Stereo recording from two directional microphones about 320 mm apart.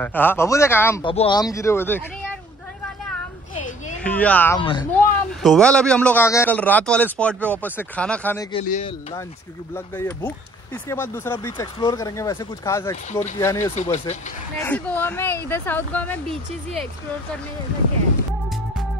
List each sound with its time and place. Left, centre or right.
0.0 s speech: centre
4.0 s a man's voice: centre
5.4 s a man's voice: centre
8.5 s a man's voice: centre
9.8 s speech: centre
13.7 s a man's voice: left
14.6 s speech: centre